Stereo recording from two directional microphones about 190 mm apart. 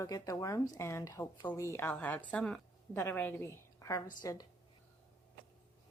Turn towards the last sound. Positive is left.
turn(degrees=20)  # may be behind; listen again after turning